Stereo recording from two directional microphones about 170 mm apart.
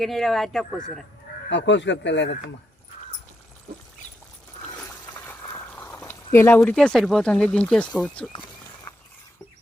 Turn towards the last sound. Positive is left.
turn(degrees=5)  # may be behind; listen again after turning